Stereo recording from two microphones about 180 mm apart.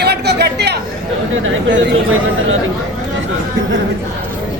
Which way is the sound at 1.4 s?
90° right.